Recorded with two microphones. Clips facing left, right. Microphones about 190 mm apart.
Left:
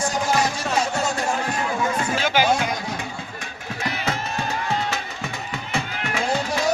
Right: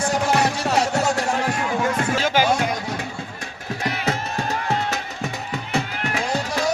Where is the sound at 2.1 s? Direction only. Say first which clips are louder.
Even; 40° right (ahead or behind).